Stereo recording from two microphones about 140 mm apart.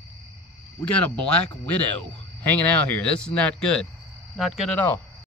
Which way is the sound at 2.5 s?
10° left (ahead or behind).